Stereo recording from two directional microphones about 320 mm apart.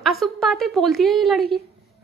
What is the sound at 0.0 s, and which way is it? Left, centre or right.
A woman's voice, centre.